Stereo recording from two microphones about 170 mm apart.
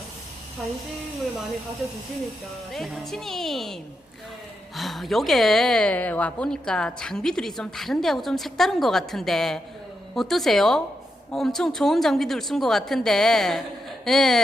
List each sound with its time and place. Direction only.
2.7 s a woman's voice: centre (ahead or behind)
4.8 s a woman's voice: centre (ahead or behind)